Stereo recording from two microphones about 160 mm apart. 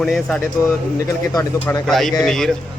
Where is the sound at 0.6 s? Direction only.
20° left (ahead or behind); by 2.6 s 5° left (ahead or behind).